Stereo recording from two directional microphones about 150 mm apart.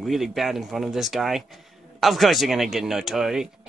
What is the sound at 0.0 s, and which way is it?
Speech, centre (ahead or behind).